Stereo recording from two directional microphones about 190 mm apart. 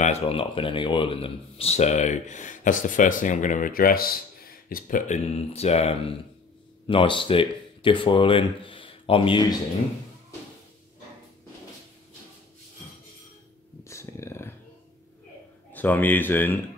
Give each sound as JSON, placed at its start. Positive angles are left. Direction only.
{"t": 0.0, "sound": "speech", "side_deg": 30}
{"t": 13.8, "sound": "a sound", "side_deg": 15}
{"t": 15.7, "sound": "speech", "side_deg": 10}